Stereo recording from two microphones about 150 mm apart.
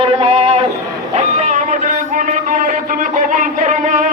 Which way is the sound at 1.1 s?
50° right (ahead or behind).